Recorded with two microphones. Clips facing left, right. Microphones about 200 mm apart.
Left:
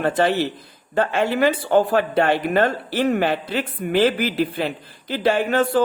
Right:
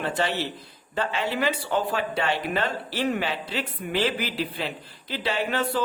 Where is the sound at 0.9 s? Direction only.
50° left (ahead or behind).